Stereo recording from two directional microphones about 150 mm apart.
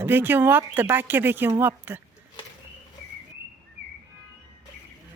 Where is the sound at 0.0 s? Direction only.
15° right (ahead or behind).